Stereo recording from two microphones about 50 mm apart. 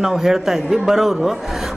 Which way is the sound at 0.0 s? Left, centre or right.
Centre.